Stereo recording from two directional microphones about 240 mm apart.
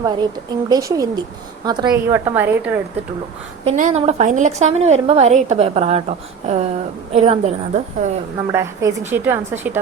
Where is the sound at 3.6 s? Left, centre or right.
Right.